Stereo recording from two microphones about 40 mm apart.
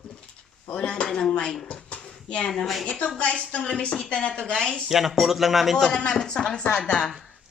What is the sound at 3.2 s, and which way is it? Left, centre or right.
A woman's voice, left.